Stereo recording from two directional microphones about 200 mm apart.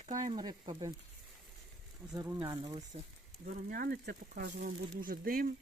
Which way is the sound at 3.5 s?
45° right (ahead or behind).